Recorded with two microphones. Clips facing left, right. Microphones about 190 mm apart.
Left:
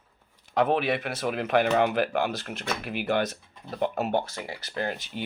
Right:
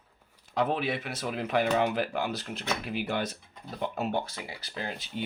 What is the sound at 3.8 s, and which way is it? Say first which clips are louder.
Speech: left 4 dB; 50° left (ahead or behind).